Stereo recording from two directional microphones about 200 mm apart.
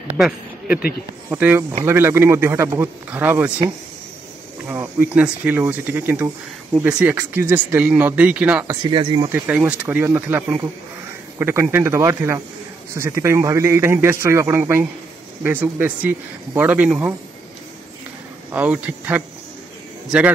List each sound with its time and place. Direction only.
0.2 s speech: centre (ahead or behind)
0.7 s speech: 50° left (ahead or behind)
1.3 s a man's voice: 10° right (ahead or behind)
4.6 s a man's voice: 5° right (ahead or behind)
8.9 s speech: 25° right (ahead or behind)
9.5 s a man's voice: 5° right (ahead or behind)
18.5 s a man's voice: 5° right (ahead or behind)